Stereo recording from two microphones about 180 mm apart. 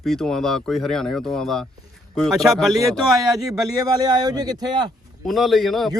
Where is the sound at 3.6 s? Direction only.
20° right (ahead or behind).